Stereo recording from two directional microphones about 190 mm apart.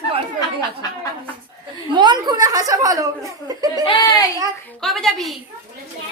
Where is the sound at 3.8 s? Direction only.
25° left (ahead or behind).